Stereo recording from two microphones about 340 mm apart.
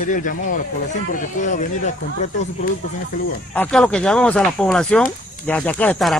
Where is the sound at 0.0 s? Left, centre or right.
Left.